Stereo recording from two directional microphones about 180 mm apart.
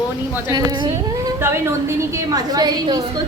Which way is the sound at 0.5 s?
20° right (ahead or behind).